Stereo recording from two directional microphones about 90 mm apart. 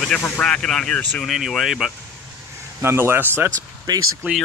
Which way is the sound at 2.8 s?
25° right (ahead or behind).